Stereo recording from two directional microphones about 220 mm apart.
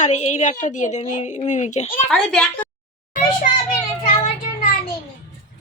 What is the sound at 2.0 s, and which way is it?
Speech, centre (ahead or behind).